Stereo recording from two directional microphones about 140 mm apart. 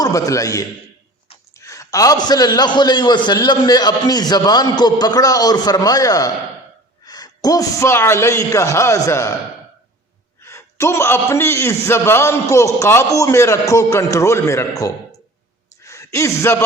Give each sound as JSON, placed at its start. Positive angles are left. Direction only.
{"t": 0.0, "sound": "a man's voice", "side_deg": 25}
{"t": 10.4, "sound": "a man's voice", "side_deg": 20}
{"t": 15.8, "sound": "speech", "side_deg": 20}